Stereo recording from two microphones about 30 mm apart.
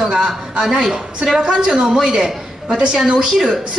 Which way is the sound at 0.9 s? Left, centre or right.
Right.